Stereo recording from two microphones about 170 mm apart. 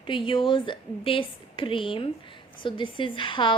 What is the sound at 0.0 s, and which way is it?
A woman's voice, 30° left (ahead or behind).